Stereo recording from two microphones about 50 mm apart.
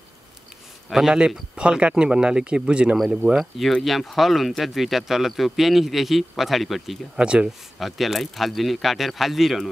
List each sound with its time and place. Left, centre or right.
0.8 s a man's voice: centre
1.5 s speech: centre
3.2 s speech: right
3.8 s speech: centre
7.2 s speech: centre
7.4 s speech: centre